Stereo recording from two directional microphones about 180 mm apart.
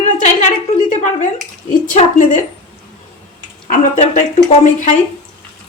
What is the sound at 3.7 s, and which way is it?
Speech, 40° left (ahead or behind).